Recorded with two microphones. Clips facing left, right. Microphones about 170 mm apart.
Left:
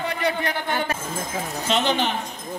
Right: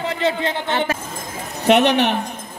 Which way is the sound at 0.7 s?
85° right.